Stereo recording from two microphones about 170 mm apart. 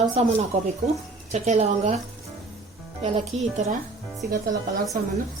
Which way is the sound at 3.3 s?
40° right (ahead or behind).